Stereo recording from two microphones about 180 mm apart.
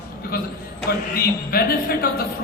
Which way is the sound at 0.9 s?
55° left (ahead or behind).